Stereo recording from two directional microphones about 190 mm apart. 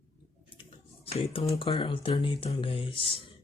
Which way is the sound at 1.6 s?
25° left (ahead or behind).